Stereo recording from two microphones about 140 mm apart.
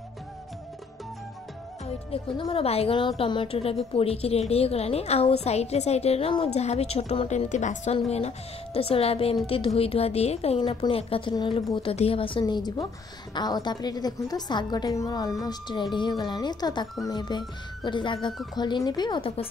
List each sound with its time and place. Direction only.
2.0 s a woman's voice: 40° left (ahead or behind)